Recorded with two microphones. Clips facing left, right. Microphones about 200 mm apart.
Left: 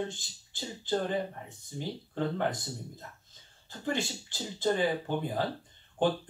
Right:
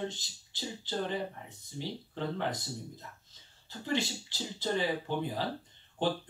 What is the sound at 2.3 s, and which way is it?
Speech, 50° left (ahead or behind).